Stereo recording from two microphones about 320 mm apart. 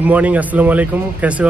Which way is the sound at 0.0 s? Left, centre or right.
Centre.